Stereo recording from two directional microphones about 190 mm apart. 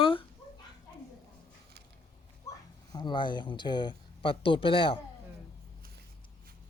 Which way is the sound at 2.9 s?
25° left (ahead or behind).